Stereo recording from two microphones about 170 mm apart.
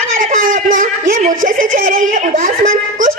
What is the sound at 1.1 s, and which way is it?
Speech, 50° right (ahead or behind).